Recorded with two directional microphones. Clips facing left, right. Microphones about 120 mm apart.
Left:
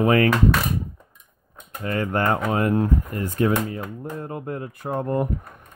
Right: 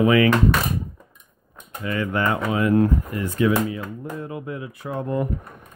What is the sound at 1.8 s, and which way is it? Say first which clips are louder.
Speech: left 1 dB; 45° left (ahead or behind).